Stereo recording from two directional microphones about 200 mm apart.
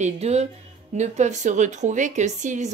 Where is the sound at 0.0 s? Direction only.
35° right (ahead or behind).